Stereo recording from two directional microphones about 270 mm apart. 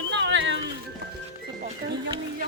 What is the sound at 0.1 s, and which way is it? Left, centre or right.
Music, right.